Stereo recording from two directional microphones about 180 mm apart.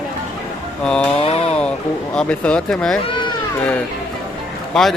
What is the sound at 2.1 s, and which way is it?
Speech, 5° left (ahead or behind).